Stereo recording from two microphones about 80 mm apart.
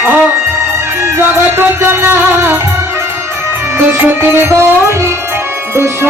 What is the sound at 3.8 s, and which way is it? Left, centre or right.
Music, right.